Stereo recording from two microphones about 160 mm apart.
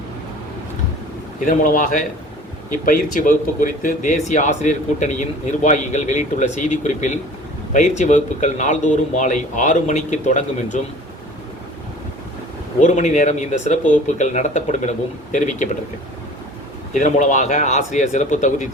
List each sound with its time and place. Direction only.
1.5 s a man's voice: 55° left (ahead or behind)
12.8 s speech: 50° left (ahead or behind)
16.9 s speech: 50° left (ahead or behind)